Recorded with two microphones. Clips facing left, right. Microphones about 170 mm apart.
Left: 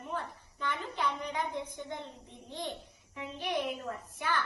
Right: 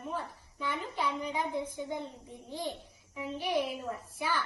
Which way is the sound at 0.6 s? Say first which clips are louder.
Even; 10° right (ahead or behind).